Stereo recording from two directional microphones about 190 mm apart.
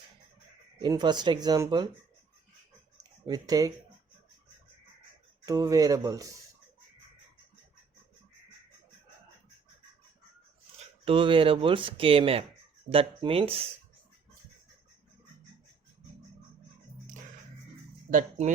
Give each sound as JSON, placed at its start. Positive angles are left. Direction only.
{"t": 0.8, "sound": "speech", "side_deg": -20}
{"t": 3.0, "sound": "a sound", "side_deg": -20}
{"t": 5.5, "sound": "speech", "side_deg": -20}
{"t": 11.0, "sound": "speech", "side_deg": -25}
{"t": 18.1, "sound": "speech", "side_deg": -40}